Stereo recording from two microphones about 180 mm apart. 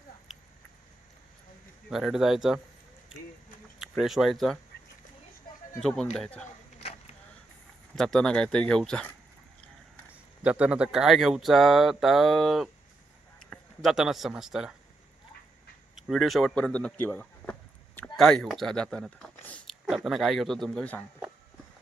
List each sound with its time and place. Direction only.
1.9 s speech: centre (ahead or behind)
3.8 s speech: centre (ahead or behind)
6.1 s speech: 5° left (ahead or behind)
6.7 s a sound: 35° left (ahead or behind)
7.9 s speech: 5° left (ahead or behind)
10.1 s speech: 5° right (ahead or behind)
16.0 s speech: centre (ahead or behind)